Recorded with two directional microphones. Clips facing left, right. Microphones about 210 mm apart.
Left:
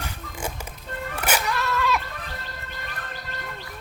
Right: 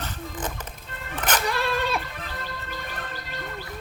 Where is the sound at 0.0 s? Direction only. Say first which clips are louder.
Right 1 dB; 10° left (ahead or behind).